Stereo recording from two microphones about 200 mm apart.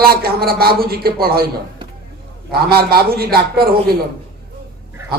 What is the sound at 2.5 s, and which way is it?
A man's voice, 50° right (ahead or behind).